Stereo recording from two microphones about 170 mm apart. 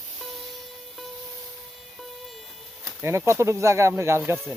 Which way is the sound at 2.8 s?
15° right (ahead or behind).